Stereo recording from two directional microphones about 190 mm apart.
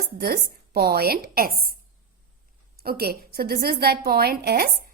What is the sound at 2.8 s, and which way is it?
A woman's voice, 55° right (ahead or behind).